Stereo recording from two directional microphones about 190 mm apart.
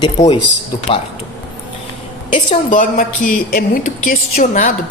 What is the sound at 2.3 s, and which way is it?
A woman's voice, 40° left (ahead or behind).